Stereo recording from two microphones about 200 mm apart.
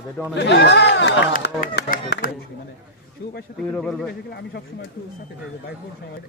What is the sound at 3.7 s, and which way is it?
Speech, 5° left (ahead or behind).